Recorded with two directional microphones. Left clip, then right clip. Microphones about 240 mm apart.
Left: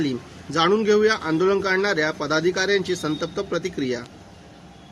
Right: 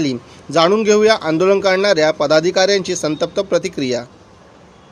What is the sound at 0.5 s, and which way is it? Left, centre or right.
A man's voice, centre.